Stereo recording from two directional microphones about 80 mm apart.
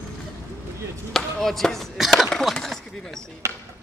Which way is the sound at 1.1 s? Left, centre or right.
Centre.